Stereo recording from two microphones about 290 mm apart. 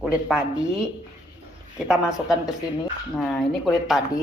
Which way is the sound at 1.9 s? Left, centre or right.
Centre.